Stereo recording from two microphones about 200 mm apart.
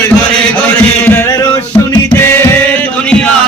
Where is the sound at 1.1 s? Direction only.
10° left (ahead or behind).